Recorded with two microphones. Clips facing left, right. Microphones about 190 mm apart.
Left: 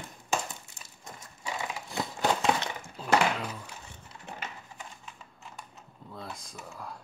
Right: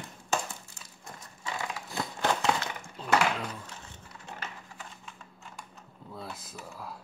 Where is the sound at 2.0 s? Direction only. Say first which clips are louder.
Left 1 dB; 15° left (ahead or behind).